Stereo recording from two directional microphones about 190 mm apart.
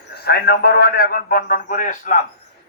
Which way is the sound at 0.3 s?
55° left (ahead or behind).